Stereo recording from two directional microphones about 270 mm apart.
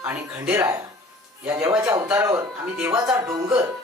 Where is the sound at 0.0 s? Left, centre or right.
Centre.